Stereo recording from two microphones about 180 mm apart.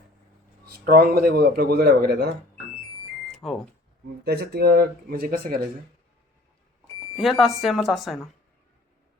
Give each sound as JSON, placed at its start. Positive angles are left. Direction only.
{"t": 0.6, "sound": "speech", "side_deg": -60}
{"t": 3.3, "sound": "speech", "side_deg": 0}
{"t": 4.2, "sound": "speech", "side_deg": -65}
{"t": 7.2, "sound": "speech", "side_deg": 0}